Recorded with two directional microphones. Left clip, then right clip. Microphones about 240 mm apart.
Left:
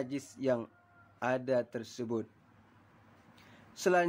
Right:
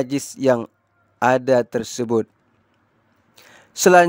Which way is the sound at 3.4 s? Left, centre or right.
Right.